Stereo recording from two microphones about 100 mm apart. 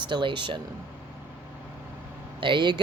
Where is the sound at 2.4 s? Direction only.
55° right (ahead or behind).